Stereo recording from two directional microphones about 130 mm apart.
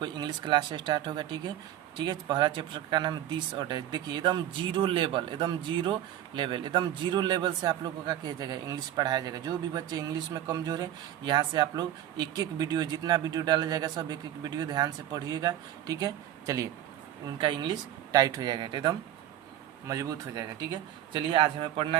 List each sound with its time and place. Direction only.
0.0 s speech: 35° right (ahead or behind)
19.9 s speech: 25° right (ahead or behind)
21.1 s speech: 40° right (ahead or behind)